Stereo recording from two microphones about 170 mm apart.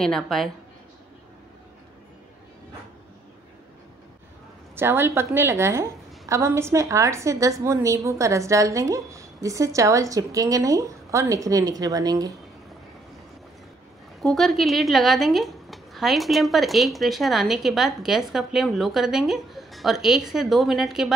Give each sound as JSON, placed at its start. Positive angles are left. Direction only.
{"t": 0.0, "sound": "a woman's voice", "side_deg": 0}
{"t": 4.7, "sound": "a woman's voice", "side_deg": -15}
{"t": 14.2, "sound": "a woman's voice", "side_deg": 0}